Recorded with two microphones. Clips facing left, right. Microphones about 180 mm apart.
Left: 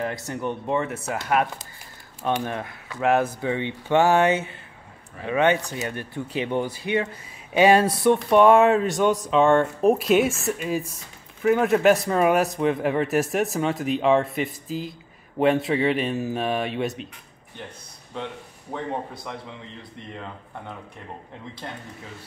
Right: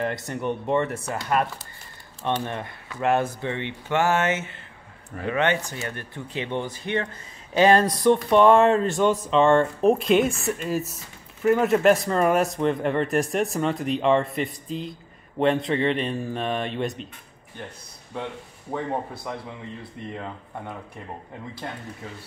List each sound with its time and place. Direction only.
0.0 s speech: centre (ahead or behind)
8.9 s speech: 15° left (ahead or behind)
9.2 s speech: centre (ahead or behind)
18.7 s speech: 5° right (ahead or behind)